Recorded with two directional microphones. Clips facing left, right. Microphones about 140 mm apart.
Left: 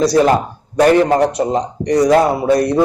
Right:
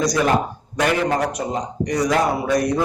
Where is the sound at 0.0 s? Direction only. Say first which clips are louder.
Left 6 dB; 30° left (ahead or behind).